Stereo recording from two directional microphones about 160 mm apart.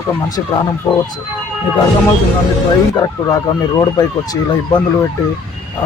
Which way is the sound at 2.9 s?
20° left (ahead or behind).